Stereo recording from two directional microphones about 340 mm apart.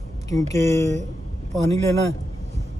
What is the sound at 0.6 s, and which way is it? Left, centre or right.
Speech, centre.